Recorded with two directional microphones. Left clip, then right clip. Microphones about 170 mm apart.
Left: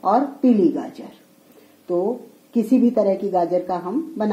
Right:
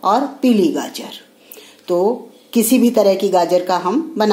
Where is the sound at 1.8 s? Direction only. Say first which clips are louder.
Right 6 dB; 40° right (ahead or behind).